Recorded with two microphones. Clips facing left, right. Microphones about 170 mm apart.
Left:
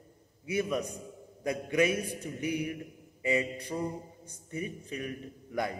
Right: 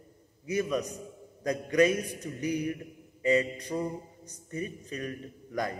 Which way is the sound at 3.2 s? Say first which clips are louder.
Right 4 dB; 15° left (ahead or behind).